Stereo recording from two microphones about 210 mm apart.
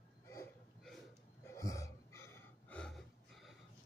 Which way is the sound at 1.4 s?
15° left (ahead or behind).